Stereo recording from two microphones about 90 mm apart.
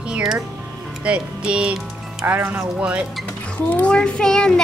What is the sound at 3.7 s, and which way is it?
Speech, 10° left (ahead or behind).